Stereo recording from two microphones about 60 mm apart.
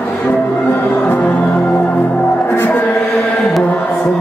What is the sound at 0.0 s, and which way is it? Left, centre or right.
Music, left.